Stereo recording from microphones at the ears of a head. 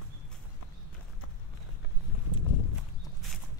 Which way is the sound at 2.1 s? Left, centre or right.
Left.